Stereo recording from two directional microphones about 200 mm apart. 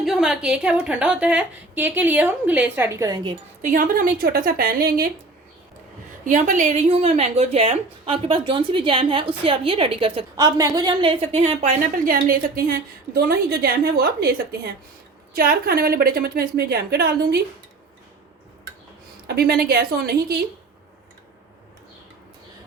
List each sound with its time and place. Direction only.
0.0 s a woman's voice: centre (ahead or behind); by 3.3 s 15° right (ahead or behind)
3.6 s a woman's voice: 45° right (ahead or behind)
6.2 s a woman's voice: 40° right (ahead or behind)
19.3 s a woman's voice: 50° right (ahead or behind)